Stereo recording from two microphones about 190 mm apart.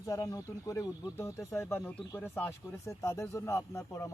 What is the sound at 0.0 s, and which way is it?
Speech, 20° left (ahead or behind).